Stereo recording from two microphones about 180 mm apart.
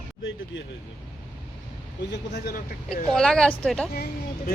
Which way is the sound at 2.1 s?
70° left (ahead or behind).